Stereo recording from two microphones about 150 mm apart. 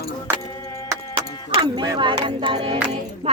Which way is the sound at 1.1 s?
30° right (ahead or behind).